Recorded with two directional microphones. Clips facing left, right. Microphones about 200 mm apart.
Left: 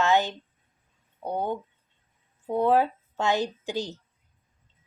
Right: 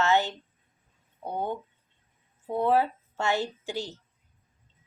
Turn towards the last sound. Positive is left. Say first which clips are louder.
# left 3 dB
turn(degrees=15)  # may be behind; listen again after turning